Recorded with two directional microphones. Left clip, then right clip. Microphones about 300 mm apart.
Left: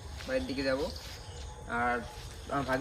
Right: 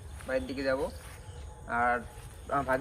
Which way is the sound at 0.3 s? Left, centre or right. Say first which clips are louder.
Right 1 dB; centre.